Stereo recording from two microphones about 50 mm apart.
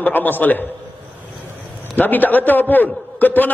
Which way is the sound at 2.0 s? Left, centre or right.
Left.